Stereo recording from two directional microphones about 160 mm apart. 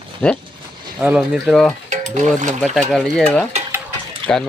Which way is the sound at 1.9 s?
50° right (ahead or behind).